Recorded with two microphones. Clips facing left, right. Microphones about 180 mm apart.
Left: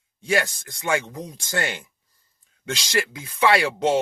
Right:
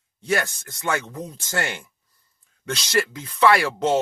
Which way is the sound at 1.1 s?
15° left (ahead or behind).